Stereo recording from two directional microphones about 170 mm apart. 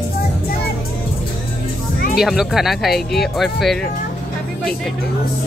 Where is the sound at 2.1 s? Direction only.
Centre (ahead or behind).